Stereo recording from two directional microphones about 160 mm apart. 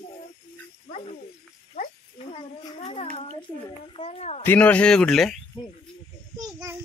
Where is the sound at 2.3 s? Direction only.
40° left (ahead or behind).